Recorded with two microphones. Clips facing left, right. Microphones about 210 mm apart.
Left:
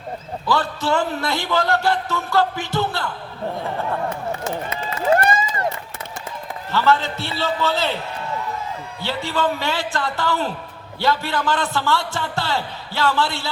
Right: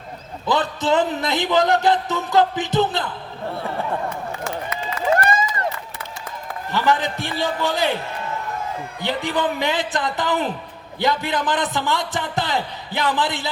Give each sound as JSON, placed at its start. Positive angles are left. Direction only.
{"t": 0.4, "sound": "a man's voice", "side_deg": -20}
{"t": 4.4, "sound": "run", "side_deg": 25}
{"t": 6.7, "sound": "a man's voice", "side_deg": -15}
{"t": 9.0, "sound": "a man's voice", "side_deg": -15}